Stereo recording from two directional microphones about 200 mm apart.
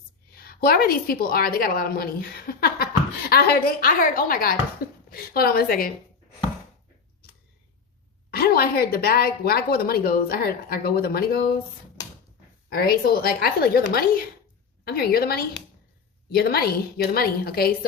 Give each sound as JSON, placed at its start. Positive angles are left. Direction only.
{"t": 0.3, "sound": "a woman's voice", "side_deg": 50}
{"t": 8.3, "sound": "a woman's voice", "side_deg": 50}
{"t": 12.7, "sound": "a woman's voice", "side_deg": 50}